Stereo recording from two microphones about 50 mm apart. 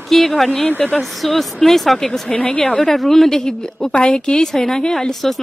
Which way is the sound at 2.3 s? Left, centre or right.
Left.